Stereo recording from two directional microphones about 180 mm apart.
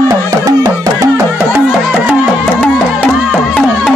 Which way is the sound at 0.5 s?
15° right (ahead or behind).